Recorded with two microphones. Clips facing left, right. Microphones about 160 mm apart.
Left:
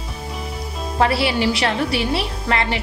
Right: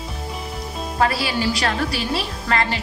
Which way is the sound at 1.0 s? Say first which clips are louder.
Left 3 dB; 25° left (ahead or behind).